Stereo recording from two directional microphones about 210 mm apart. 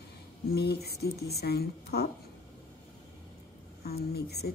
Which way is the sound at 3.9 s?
50° left (ahead or behind).